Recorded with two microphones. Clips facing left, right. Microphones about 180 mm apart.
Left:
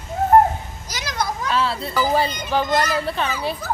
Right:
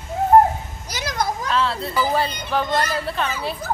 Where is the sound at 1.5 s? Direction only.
5° left (ahead or behind).